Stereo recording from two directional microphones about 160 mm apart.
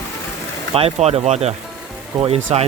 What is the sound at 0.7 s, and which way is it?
Speech, 40° right (ahead or behind).